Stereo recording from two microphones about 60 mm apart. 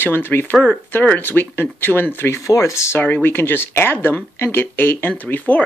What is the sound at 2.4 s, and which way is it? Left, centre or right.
Speech, left.